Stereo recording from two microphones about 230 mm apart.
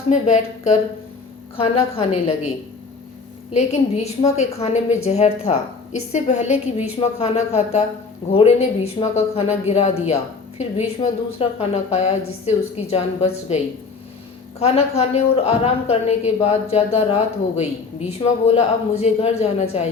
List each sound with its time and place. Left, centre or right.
0.1 s a woman's voice: left
3.5 s a woman's voice: left
14.6 s a woman's voice: left